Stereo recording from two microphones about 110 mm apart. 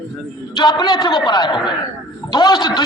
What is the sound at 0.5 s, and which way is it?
A man's voice, 40° left (ahead or behind).